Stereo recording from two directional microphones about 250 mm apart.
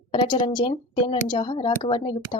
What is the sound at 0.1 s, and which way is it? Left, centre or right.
Speech, centre.